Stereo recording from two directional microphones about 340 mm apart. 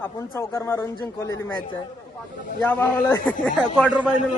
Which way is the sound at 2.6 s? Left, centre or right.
Centre.